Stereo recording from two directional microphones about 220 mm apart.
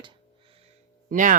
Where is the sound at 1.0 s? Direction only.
35° right (ahead or behind).